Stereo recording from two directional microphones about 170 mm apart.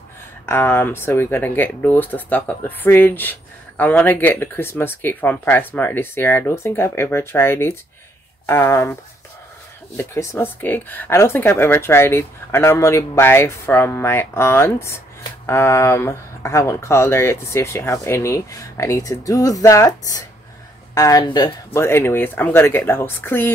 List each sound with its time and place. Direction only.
0.5 s speech: 15° left (ahead or behind)
9.9 s speech: 15° left (ahead or behind)